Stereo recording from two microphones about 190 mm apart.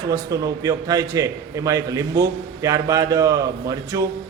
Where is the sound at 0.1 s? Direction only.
20° right (ahead or behind).